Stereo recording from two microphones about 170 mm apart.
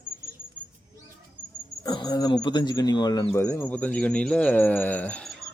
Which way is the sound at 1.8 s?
25° left (ahead or behind).